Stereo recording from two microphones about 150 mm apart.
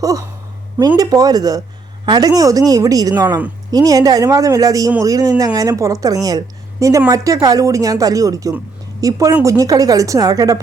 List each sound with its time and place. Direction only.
0.0 s a woman's voice: 25° right (ahead or behind)